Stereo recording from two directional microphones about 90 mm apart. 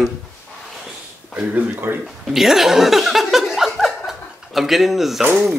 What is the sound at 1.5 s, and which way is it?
Speech, 25° right (ahead or behind).